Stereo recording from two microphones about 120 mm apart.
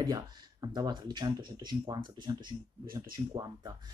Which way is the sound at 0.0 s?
30° right (ahead or behind).